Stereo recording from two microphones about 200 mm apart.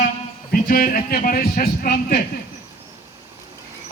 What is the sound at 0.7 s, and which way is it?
A man's voice, 45° left (ahead or behind).